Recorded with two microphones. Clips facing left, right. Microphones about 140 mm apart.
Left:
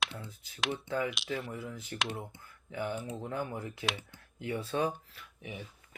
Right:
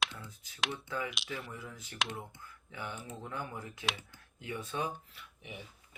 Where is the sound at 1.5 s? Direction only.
25° left (ahead or behind).